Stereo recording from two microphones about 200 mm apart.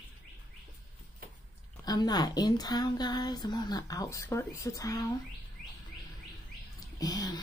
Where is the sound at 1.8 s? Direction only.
20° left (ahead or behind).